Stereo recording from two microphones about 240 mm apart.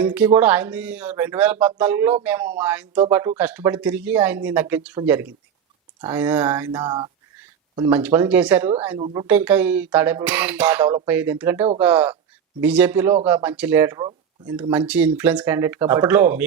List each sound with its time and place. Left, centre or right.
0.0 s speech: centre
6.8 s speech: centre
7.3 s speech: centre
9.0 s speech: right
9.2 s speech: centre